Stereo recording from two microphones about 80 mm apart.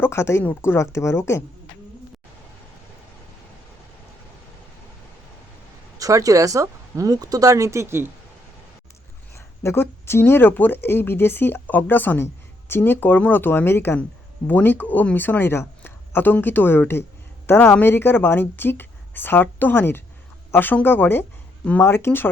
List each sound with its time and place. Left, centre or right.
0.0 s speech: left
6.0 s speech: right
9.3 s speech: left